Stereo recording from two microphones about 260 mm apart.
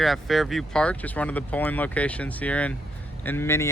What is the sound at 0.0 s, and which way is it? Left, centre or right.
Speech, centre.